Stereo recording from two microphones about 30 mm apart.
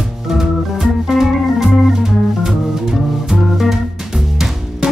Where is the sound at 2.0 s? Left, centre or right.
Centre.